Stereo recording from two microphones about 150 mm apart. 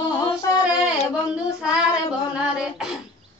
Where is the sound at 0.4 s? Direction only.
20° left (ahead or behind).